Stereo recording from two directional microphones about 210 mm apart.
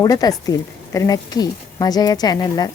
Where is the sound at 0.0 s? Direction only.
15° left (ahead or behind).